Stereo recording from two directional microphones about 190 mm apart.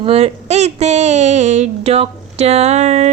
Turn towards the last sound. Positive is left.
turn(degrees=-35)  # may be behind; listen again after turning